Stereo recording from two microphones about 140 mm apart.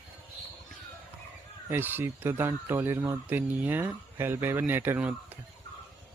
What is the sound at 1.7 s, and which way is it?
Speech, 15° right (ahead or behind).